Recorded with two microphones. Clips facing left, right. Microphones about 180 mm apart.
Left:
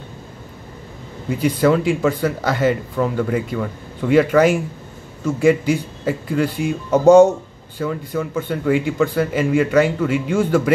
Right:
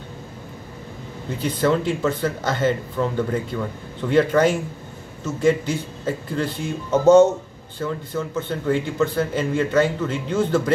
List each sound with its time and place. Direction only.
1.4 s speech: 10° left (ahead or behind)